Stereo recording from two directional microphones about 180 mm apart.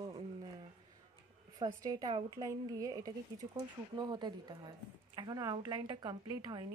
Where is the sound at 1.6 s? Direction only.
20° right (ahead or behind).